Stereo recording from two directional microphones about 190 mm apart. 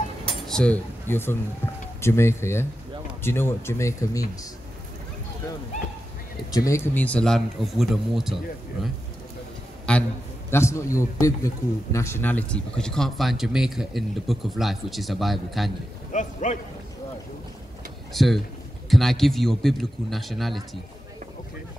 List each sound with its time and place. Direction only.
0.3 s speech: 5° left (ahead or behind)
6.5 s a man's voice: 15° left (ahead or behind); by 8.4 s centre (ahead or behind)
9.9 s a man's voice: 5° left (ahead or behind)
16.1 s a man's voice: 40° left (ahead or behind)
18.1 s a man's voice: centre (ahead or behind)